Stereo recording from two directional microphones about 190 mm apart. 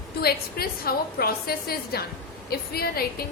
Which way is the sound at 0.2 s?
55° left (ahead or behind).